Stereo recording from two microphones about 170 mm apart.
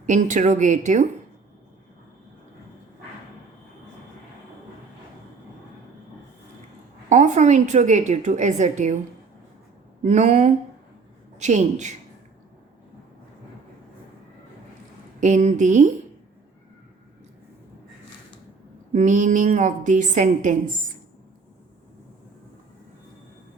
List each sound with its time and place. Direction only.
0.0 s a woman's voice: 45° right (ahead or behind)
7.1 s a woman's voice: 45° right (ahead or behind)
10.0 s a woman's voice: 45° right (ahead or behind)
15.2 s a woman's voice: 45° right (ahead or behind)
18.9 s a woman's voice: 45° right (ahead or behind)